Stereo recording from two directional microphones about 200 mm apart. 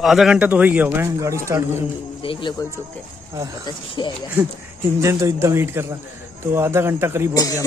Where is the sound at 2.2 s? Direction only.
25° left (ahead or behind).